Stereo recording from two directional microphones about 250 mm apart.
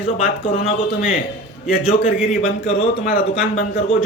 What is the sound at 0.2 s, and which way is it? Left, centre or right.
A man's voice, left.